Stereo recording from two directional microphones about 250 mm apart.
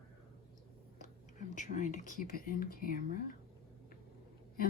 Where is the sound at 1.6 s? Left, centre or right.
Left.